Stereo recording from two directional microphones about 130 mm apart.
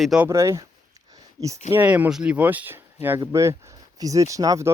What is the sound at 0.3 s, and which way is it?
Speech, 20° right (ahead or behind).